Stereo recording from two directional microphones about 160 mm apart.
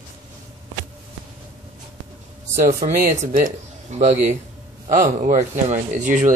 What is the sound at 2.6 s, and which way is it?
Speech, 55° right (ahead or behind).